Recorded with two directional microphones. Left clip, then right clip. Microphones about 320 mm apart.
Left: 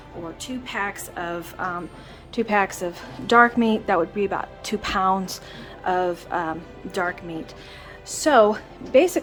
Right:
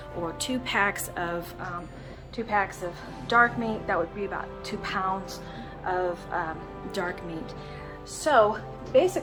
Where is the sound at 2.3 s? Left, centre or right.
Left.